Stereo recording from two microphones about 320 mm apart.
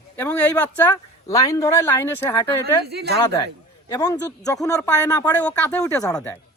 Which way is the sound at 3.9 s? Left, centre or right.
Centre.